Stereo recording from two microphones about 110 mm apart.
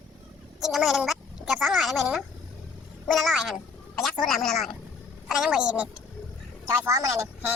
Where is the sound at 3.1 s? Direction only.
Centre (ahead or behind).